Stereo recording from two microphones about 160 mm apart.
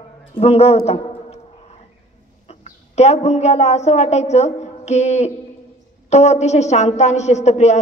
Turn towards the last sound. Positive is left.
turn(degrees=45)  # may be behind; listen again after turning